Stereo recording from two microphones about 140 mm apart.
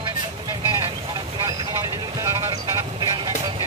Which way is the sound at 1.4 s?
20° right (ahead or behind).